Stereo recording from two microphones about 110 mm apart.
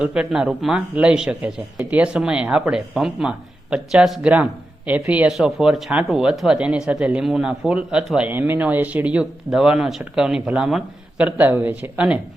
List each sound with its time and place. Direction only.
0.0 s speech: 5° right (ahead or behind)